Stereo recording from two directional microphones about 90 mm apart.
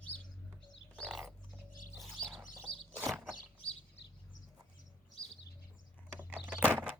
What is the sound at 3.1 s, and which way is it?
Vehicle, 5° right (ahead or behind).